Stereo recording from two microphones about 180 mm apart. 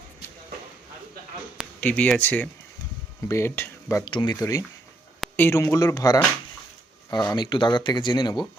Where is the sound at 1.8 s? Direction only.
10° left (ahead or behind); by 8.4 s 25° left (ahead or behind).